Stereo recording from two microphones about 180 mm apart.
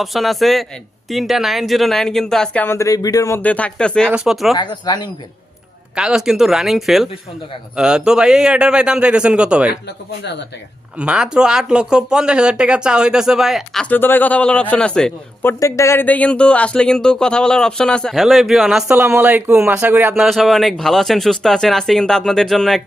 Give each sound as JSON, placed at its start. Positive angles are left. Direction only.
{"t": 0.0, "sound": "a man's voice", "side_deg": 0}
{"t": 4.5, "sound": "speech", "side_deg": 25}
{"t": 6.0, "sound": "a man's voice", "side_deg": -5}
{"t": 10.9, "sound": "a man's voice", "side_deg": -5}
{"t": 13.9, "sound": "a man's voice", "side_deg": 10}